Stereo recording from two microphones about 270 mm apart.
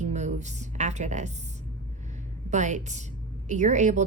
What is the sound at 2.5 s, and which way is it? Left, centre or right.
A woman's voice, right.